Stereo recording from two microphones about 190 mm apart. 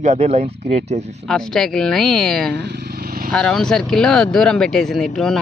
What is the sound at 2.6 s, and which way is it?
Vehicle, 60° right (ahead or behind).